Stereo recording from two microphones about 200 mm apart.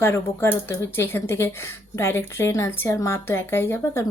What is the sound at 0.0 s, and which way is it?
Speech, 10° left (ahead or behind).